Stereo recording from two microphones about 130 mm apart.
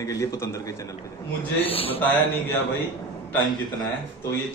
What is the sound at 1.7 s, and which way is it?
Speech, 45° left (ahead or behind).